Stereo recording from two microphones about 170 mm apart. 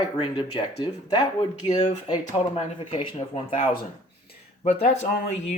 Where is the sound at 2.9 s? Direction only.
35° left (ahead or behind).